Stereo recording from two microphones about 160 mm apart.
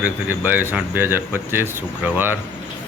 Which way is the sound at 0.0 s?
10° right (ahead or behind).